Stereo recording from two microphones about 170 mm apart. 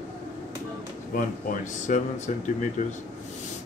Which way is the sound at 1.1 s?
50° left (ahead or behind).